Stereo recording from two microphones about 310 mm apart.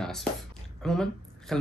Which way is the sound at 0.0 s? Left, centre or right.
Centre.